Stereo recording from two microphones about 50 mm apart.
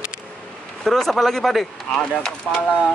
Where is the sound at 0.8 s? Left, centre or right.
Centre.